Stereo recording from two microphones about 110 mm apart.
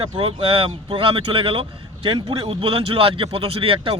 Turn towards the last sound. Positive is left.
turn(degrees=-60)  # may be behind; listen again after turning